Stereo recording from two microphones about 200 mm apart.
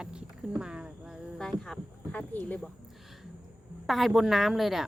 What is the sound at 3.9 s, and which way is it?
Speech, centre (ahead or behind).